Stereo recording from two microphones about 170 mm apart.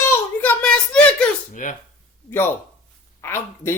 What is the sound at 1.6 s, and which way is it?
Speech, 45° left (ahead or behind).